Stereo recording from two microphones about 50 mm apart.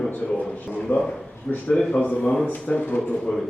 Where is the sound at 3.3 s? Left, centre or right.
Centre.